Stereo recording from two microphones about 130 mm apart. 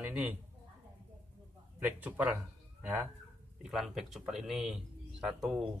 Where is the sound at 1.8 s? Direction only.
10° right (ahead or behind).